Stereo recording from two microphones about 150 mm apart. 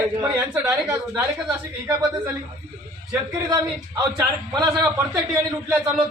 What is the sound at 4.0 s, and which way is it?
Speech, 20° right (ahead or behind).